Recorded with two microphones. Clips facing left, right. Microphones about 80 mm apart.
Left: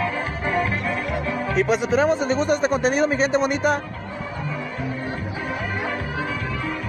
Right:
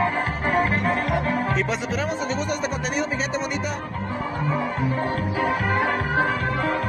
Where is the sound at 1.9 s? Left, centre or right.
Left.